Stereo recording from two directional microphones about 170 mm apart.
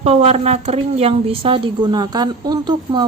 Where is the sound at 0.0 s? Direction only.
40° right (ahead or behind).